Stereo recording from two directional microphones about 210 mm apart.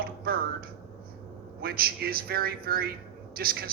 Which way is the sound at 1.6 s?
45° right (ahead or behind).